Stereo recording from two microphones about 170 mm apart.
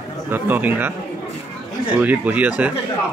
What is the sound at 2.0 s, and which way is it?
Speech, 10° right (ahead or behind).